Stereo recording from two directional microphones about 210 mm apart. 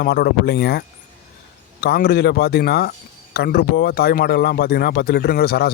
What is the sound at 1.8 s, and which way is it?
Speech, 45° left (ahead or behind).